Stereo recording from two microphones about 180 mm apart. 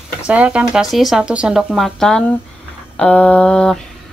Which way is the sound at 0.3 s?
5° right (ahead or behind).